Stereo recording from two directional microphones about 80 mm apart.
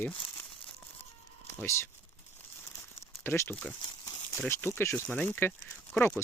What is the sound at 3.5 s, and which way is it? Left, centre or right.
Speech, centre.